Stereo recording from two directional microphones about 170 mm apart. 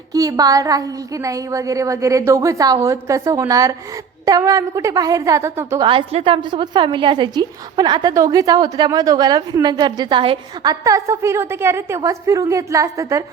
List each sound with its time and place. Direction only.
0.1 s a woman's voice: 20° right (ahead or behind)
5.9 s a woman's voice: 35° right (ahead or behind); by 13.2 s 20° right (ahead or behind)